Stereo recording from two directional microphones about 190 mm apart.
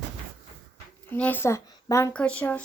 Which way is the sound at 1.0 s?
10° left (ahead or behind).